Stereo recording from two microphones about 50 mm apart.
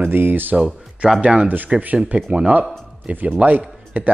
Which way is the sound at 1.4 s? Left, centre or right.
Right.